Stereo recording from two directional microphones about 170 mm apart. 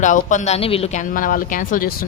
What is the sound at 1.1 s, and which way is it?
Speech, 55° left (ahead or behind).